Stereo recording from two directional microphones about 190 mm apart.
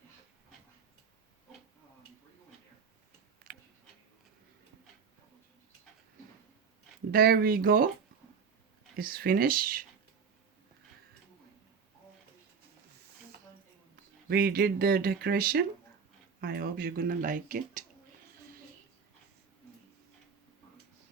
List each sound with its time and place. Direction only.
3.5 s a sound: 45° right (ahead or behind)
7.1 s speech: 50° right (ahead or behind)
9.0 s speech: 50° right (ahead or behind)
14.3 s speech: 50° right (ahead or behind)